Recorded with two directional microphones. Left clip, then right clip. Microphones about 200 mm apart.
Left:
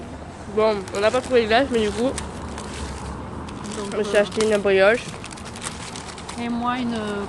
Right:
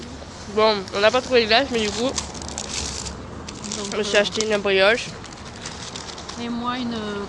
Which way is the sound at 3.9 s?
Centre (ahead or behind).